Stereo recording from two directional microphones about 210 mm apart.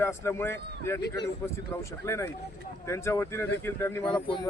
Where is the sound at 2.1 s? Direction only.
10° left (ahead or behind).